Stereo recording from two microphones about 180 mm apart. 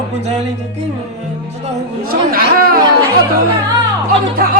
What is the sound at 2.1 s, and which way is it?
Speech, 55° right (ahead or behind).